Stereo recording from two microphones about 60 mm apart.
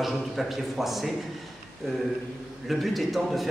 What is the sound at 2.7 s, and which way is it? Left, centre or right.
Speech, centre.